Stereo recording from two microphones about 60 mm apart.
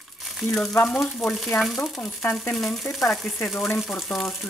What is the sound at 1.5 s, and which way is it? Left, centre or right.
Speech, left.